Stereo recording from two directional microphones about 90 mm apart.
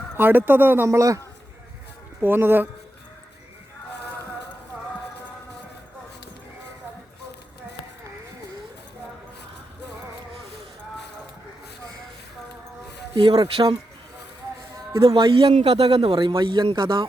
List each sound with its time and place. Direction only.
0.2 s speech: 25° right (ahead or behind)
0.9 s a man's voice: 35° right (ahead or behind)
2.2 s speech: 25° right (ahead or behind)
13.1 s speech: 80° right
15.0 s a man's voice: 75° right (ahead or behind)